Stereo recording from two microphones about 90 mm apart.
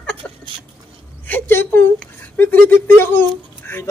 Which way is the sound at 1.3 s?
25° left (ahead or behind).